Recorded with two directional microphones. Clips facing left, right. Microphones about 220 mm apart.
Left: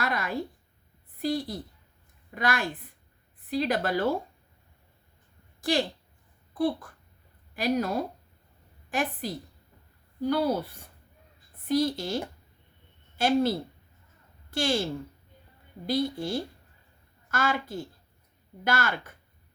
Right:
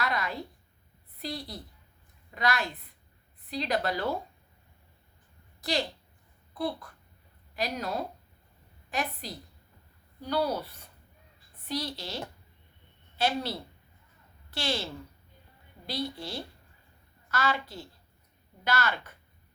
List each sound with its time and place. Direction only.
0.0 s a sound: 50° left (ahead or behind)
1.2 s speech: 50° left (ahead or behind)
5.5 s a woman's voice: 50° left (ahead or behind)
15.9 s a woman's voice: 50° left (ahead or behind)